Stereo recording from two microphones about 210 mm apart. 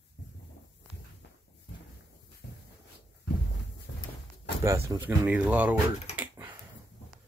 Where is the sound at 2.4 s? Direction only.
45° left (ahead or behind).